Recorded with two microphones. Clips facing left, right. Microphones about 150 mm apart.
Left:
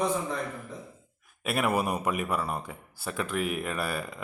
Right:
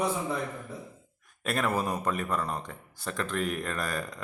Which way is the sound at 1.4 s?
10° left (ahead or behind).